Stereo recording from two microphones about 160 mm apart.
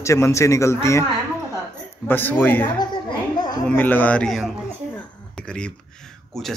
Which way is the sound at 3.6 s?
10° left (ahead or behind).